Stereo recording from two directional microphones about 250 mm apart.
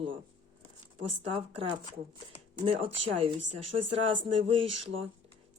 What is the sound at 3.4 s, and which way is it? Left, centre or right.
Speech, right.